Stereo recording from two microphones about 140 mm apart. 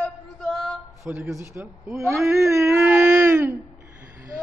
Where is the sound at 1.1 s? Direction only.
20° right (ahead or behind).